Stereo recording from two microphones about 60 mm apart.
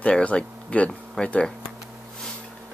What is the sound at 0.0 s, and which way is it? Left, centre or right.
Speech, left.